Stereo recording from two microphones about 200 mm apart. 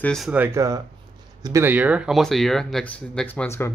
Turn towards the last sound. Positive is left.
turn(degrees=10)  # may be behind; listen again after turning